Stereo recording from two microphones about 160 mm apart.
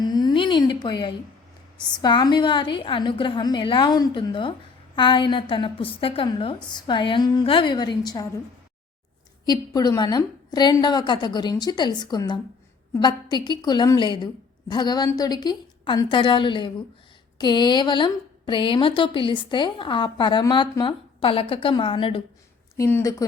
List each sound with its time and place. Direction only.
0.0 s a sound: 25° left (ahead or behind)
2.0 s a woman's voice: 25° left (ahead or behind)
9.5 s a woman's voice: 25° left (ahead or behind)
22.8 s a woman's voice: 15° left (ahead or behind)